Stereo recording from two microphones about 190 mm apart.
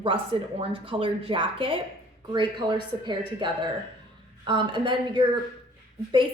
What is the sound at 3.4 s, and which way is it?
A woman's voice, 25° right (ahead or behind).